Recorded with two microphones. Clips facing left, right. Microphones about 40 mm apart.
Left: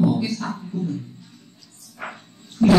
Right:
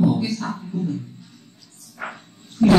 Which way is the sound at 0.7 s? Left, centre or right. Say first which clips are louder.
Right 2 dB; right.